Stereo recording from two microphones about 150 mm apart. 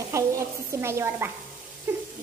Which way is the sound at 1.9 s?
15° right (ahead or behind).